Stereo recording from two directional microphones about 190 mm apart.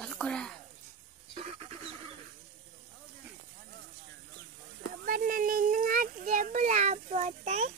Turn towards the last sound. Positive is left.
turn(degrees=-40)  # may be behind; listen again after turning